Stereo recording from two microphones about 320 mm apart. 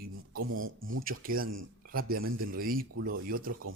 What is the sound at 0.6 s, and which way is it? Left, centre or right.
Speech, right.